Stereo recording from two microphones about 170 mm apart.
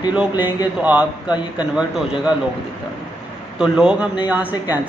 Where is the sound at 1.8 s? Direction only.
5° right (ahead or behind).